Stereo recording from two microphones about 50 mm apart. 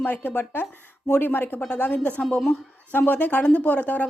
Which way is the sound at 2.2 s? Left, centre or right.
Centre.